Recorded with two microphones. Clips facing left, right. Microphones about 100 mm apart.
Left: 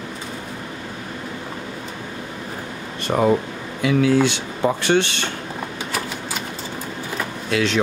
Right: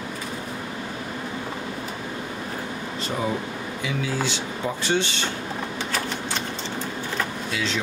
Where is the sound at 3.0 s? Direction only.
60° left (ahead or behind).